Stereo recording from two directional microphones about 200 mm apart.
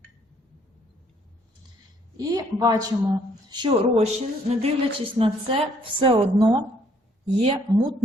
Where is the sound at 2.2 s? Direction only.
20° right (ahead or behind).